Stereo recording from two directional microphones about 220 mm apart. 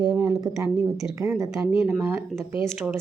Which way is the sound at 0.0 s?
15° right (ahead or behind).